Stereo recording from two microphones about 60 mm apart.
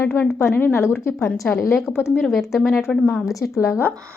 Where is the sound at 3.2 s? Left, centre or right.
Left.